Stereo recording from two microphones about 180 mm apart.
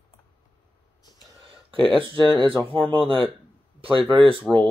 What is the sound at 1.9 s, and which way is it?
Speech, 30° right (ahead or behind).